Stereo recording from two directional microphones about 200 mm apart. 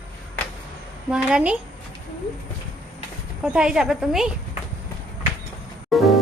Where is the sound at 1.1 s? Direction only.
5° right (ahead or behind).